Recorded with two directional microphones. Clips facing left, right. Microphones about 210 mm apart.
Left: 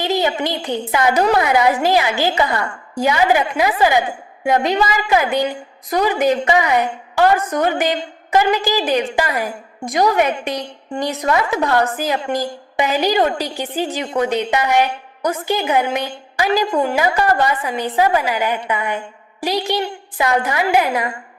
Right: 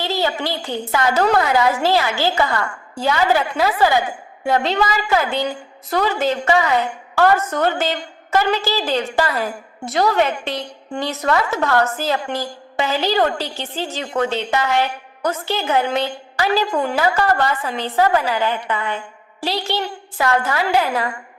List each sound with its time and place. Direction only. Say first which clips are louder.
0.0 s a woman's voice: left 3 dB; 15° left (ahead or behind)